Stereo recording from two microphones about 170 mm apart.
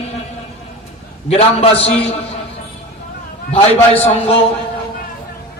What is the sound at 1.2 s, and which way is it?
Speech, 35° left (ahead or behind).